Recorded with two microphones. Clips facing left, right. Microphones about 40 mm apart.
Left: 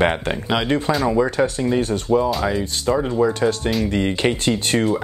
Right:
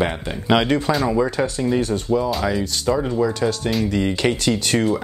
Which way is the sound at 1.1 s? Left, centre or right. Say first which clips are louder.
Left 2 dB; left.